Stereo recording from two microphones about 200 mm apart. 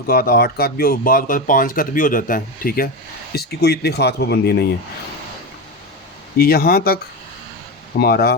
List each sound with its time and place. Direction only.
0.1 s speech: 50° left (ahead or behind)
6.3 s speech: 50° left (ahead or behind)